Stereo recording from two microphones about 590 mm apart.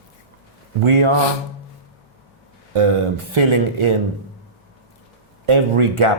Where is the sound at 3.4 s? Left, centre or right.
Right.